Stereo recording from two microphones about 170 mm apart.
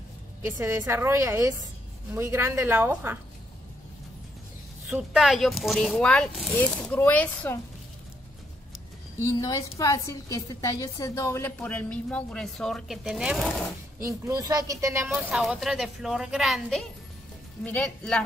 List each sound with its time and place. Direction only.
0.5 s a woman's voice: 15° right (ahead or behind)
4.8 s speech: 5° right (ahead or behind)
9.3 s a woman's voice: 20° left (ahead or behind); by 13.5 s centre (ahead or behind)
14.0 s speech: 20° right (ahead or behind)
15.0 s speech: 5° right (ahead or behind)